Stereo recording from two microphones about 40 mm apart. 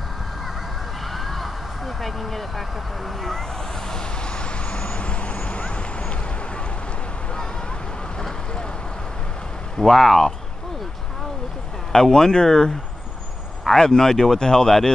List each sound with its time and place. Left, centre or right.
1.1 s vehicle: centre
3.2 s speech: centre
3.9 s vehicle: left
9.8 s speech: centre
11.9 s speech: centre
13.7 s speech: centre